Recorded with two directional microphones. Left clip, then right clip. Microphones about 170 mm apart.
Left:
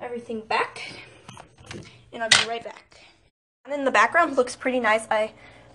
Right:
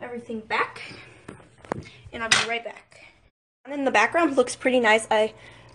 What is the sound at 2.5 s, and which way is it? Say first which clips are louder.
Speech: right 2 dB; 5° right (ahead or behind).